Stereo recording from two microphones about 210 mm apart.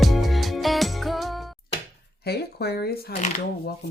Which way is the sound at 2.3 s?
50° left (ahead or behind).